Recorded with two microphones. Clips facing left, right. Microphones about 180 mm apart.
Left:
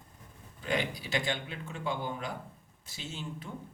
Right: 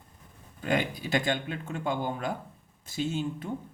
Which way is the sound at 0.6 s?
50° right (ahead or behind).